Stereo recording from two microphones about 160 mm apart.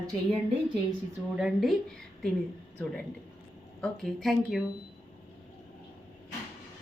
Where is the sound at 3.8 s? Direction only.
5° left (ahead or behind).